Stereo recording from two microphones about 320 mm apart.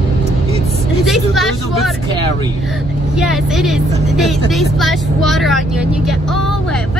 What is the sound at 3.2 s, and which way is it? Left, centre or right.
A woman's voice, centre.